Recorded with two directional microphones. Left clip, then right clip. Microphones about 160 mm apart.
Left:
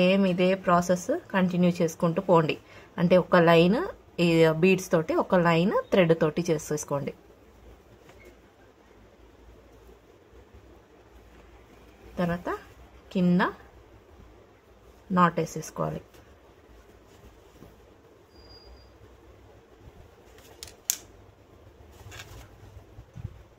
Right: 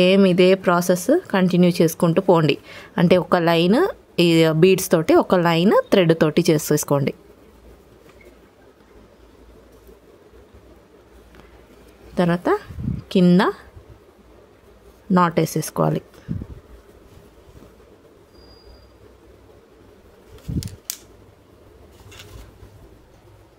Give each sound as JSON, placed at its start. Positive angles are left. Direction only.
{"t": 0.0, "sound": "speech", "side_deg": -60}
{"t": 12.2, "sound": "speech", "side_deg": -55}
{"t": 15.1, "sound": "speech", "side_deg": -55}